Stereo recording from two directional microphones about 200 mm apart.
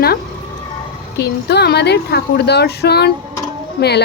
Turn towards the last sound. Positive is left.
turn(degrees=55)  # may be behind; listen again after turning